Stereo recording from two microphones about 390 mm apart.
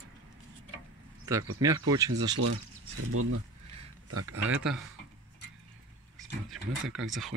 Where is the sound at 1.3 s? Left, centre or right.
Centre.